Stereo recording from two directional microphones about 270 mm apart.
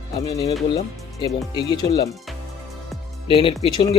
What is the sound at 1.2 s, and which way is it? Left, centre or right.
Speech, centre.